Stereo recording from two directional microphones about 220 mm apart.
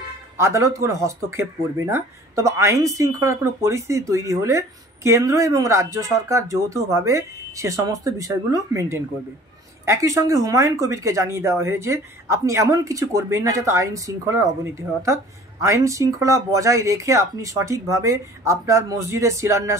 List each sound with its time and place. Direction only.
0.4 s speech: 15° right (ahead or behind)